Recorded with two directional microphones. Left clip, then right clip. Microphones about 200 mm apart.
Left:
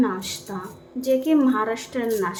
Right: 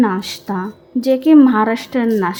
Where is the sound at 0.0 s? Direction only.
40° right (ahead or behind).